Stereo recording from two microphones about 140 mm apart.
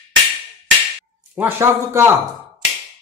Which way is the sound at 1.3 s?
15° right (ahead or behind).